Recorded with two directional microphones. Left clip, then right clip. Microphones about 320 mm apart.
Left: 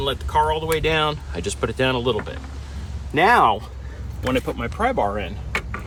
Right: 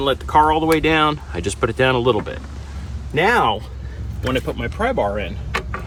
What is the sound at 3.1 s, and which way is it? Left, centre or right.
Speech, left.